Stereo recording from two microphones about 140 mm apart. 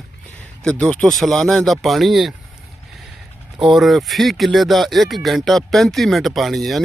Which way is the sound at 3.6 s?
Centre (ahead or behind).